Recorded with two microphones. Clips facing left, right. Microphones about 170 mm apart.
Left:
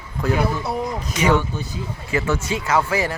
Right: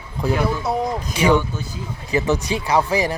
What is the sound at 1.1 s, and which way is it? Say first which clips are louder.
Speech: right 1 dB; 10° right (ahead or behind).